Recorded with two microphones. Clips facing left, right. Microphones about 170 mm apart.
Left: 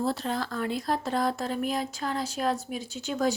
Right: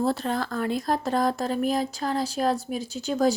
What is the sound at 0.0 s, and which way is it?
Speech, 50° right (ahead or behind).